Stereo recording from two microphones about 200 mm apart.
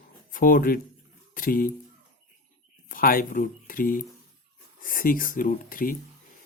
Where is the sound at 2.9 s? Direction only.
45° left (ahead or behind).